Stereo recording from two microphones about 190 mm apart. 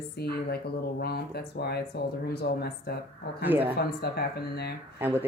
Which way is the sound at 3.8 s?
55° left (ahead or behind).